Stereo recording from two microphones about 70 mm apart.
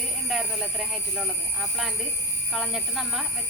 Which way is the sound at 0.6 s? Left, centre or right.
Centre.